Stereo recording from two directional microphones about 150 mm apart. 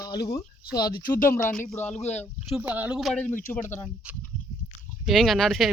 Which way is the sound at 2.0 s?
45° left (ahead or behind).